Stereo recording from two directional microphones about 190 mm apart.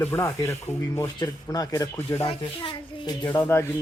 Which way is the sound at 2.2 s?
25° left (ahead or behind).